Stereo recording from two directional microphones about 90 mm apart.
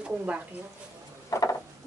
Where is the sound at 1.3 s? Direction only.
35° left (ahead or behind).